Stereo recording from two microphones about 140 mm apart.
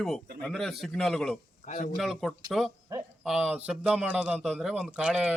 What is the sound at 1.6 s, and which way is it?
Speech, 65° left (ahead or behind).